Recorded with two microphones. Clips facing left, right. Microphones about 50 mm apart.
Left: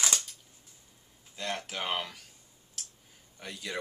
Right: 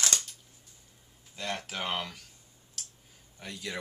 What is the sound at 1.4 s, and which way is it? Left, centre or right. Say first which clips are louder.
Speech: even; centre.